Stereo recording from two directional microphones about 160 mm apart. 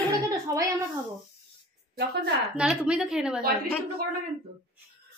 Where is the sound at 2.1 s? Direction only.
90° right.